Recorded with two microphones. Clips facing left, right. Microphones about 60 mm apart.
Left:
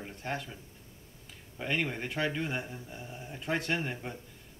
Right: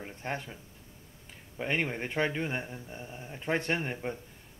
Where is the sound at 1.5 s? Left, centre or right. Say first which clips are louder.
Right 1 dB; right.